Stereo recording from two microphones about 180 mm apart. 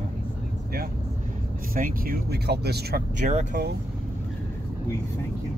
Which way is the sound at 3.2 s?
40° right (ahead or behind).